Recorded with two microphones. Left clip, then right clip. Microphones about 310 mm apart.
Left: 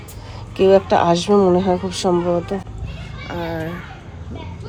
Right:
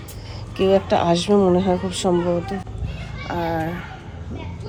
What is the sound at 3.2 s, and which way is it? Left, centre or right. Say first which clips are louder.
Speech: right 2 dB; centre.